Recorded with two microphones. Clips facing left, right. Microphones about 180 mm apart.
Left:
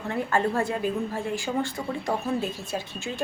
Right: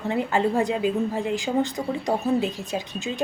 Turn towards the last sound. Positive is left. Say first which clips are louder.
# right 3 dB
turn(degrees=-15)  # may be behind; listen again after turning